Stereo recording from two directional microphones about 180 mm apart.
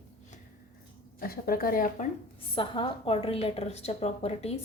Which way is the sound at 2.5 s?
30° left (ahead or behind).